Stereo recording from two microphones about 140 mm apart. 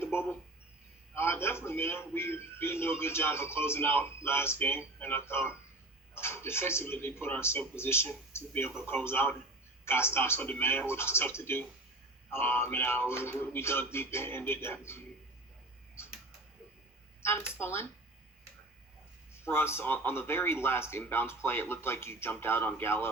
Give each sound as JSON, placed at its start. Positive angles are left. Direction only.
{"t": 0.0, "sound": "a sound", "side_deg": 15}
{"t": 1.1, "sound": "a man's voice", "side_deg": 15}
{"t": 17.2, "sound": "a man's voice", "side_deg": 15}
{"t": 19.5, "sound": "a man's voice", "side_deg": 15}